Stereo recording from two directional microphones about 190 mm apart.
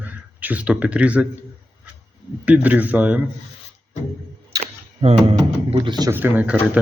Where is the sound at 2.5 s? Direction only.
10° right (ahead or behind).